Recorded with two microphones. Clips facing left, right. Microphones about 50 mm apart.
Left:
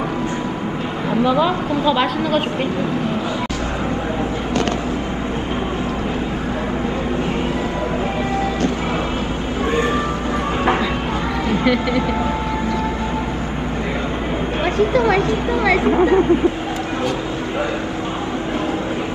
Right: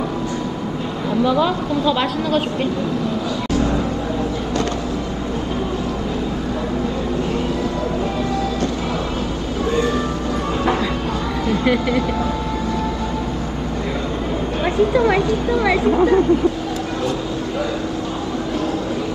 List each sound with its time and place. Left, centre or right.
1.2 s speech: centre
11.6 s speech: centre
14.6 s a sound: left
15.8 s speech: left